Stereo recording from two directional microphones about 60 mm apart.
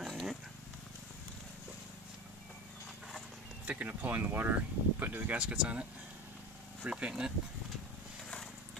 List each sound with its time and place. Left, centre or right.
0.1 s purr: centre
3.6 s speech: right